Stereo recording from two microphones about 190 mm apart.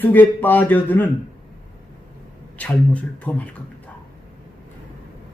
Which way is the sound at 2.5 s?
5° left (ahead or behind).